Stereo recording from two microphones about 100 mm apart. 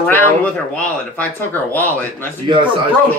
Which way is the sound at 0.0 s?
15° left (ahead or behind).